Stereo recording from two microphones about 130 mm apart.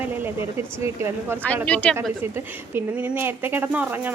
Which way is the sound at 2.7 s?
15° right (ahead or behind).